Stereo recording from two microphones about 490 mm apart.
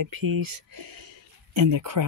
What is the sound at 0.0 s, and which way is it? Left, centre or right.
Speech, right.